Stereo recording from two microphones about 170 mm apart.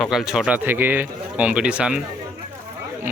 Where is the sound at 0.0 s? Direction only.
Centre (ahead or behind).